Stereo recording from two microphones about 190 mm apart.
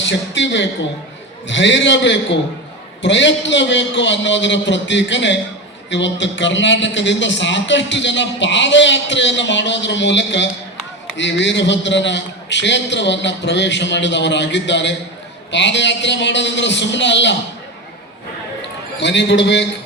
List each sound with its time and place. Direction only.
0.0 s a man's voice: 70° left (ahead or behind)
18.9 s a man's voice: 70° left (ahead or behind)